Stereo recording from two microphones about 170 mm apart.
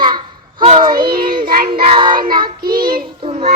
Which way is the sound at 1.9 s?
30° right (ahead or behind).